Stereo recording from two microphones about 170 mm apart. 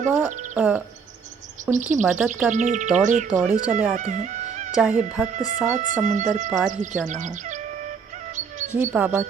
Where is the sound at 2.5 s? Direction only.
45° right (ahead or behind).